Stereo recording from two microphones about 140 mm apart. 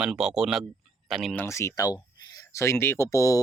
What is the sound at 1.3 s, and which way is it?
Speech, 20° left (ahead or behind).